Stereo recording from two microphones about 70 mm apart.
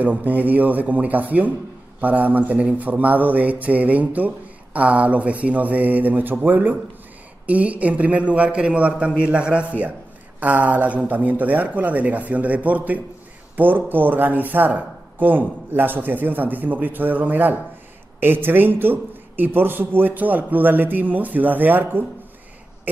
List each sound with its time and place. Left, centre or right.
0.0 s a man's voice: right